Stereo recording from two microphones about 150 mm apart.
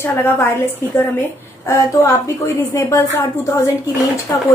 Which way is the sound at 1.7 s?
20° left (ahead or behind).